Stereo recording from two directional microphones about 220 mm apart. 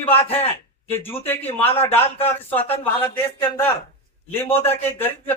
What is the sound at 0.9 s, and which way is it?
A man's voice, 10° left (ahead or behind).